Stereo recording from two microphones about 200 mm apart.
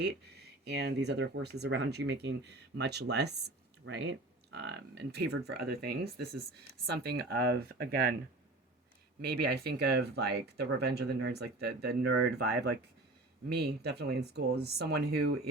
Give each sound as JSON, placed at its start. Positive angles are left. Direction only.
{"t": 0.0, "sound": "speech", "side_deg": -55}
{"t": 9.2, "sound": "speech", "side_deg": -50}
{"t": 13.5, "sound": "speech", "side_deg": -55}